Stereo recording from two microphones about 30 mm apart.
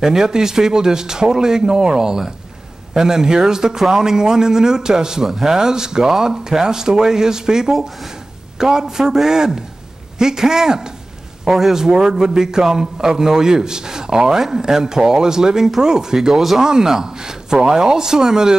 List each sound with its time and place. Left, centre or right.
0.0 s a man's voice: right
11.4 s a man's voice: centre
11.7 s a man's voice: centre